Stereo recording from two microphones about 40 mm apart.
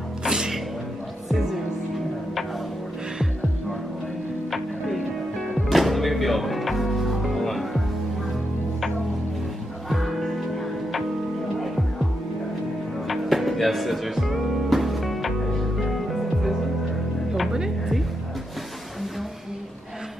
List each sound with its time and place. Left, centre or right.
0.2 s music: centre
4.5 s music: centre
9.8 s music: centre
11.6 s music: centre
13.1 s music: centre
17.5 s music: centre